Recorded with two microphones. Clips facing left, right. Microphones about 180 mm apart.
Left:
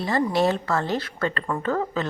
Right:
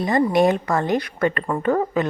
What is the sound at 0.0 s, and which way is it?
A woman's voice, 15° right (ahead or behind).